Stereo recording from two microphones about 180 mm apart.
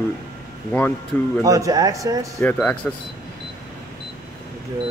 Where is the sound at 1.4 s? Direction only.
20° right (ahead or behind).